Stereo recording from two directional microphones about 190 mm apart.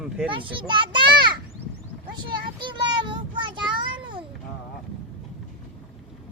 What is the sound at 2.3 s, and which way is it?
Child singing, 25° right (ahead or behind).